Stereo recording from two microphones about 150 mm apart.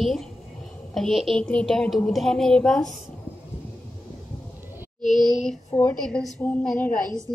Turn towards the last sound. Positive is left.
turn(degrees=5)  # may be behind; listen again after turning